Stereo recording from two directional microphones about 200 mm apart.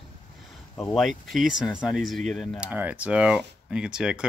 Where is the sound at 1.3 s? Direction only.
Centre (ahead or behind).